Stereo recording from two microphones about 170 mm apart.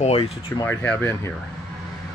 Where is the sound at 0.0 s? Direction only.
35° left (ahead or behind).